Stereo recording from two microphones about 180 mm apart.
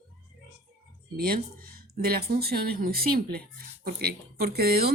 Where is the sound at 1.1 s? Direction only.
55° right (ahead or behind).